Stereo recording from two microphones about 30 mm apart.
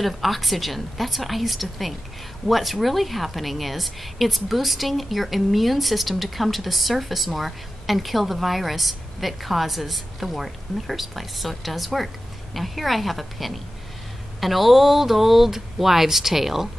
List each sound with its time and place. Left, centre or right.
0.0 s a woman's voice: centre